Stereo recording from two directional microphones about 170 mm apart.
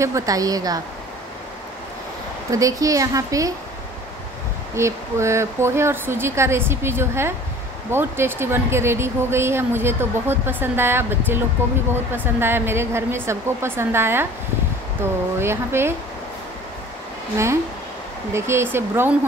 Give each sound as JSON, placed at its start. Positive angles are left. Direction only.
{"t": 0.0, "sound": "a woman's voice", "side_deg": -20}
{"t": 2.5, "sound": "a woman's voice", "side_deg": -20}
{"t": 4.7, "sound": "speech", "side_deg": -15}
{"t": 15.3, "sound": "speech", "side_deg": -15}
{"t": 18.3, "sound": "speech", "side_deg": -15}